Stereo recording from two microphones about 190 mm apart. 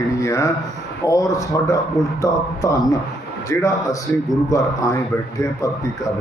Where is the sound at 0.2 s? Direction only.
15° left (ahead or behind).